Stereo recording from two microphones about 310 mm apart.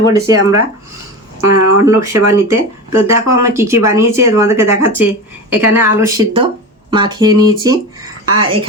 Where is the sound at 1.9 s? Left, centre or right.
Centre.